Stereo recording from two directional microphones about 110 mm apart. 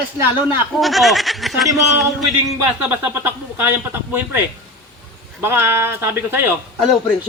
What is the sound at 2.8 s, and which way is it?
Speech, 20° right (ahead or behind).